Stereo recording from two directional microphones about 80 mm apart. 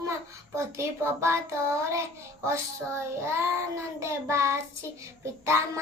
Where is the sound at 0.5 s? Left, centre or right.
Right.